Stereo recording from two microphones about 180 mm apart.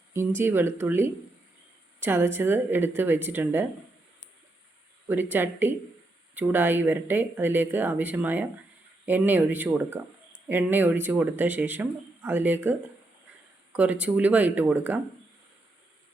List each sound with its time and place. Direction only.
0.1 s speech: 15° right (ahead or behind)
5.0 s speech: 10° right (ahead or behind)
13.7 s speech: 10° right (ahead or behind)